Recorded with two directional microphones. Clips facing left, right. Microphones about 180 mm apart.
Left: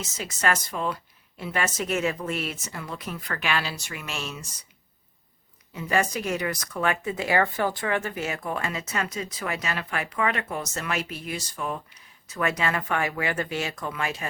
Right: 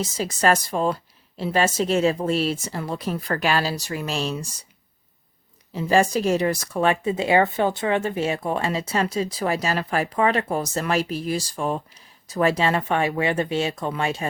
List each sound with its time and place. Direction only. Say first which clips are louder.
0.0 s speech: right 6 dB; 35° right (ahead or behind)
5.7 s speech: right 6 dB; 30° right (ahead or behind)